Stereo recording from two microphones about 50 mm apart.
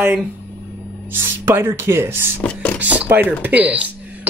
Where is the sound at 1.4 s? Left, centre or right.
Right.